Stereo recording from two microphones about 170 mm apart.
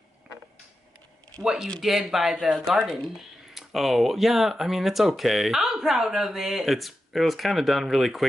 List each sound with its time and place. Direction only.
1.4 s speech: 5° right (ahead or behind)